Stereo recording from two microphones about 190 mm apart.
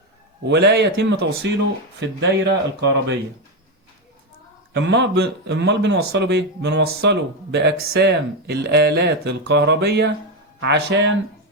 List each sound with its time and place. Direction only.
0.4 s a man's voice: 65° right (ahead or behind)
4.7 s a man's voice: 65° right (ahead or behind)